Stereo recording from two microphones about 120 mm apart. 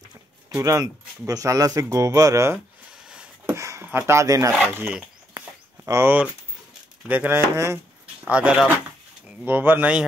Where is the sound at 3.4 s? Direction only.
25° right (ahead or behind).